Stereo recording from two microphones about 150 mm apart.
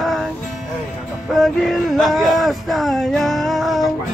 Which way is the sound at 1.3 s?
Centre (ahead or behind).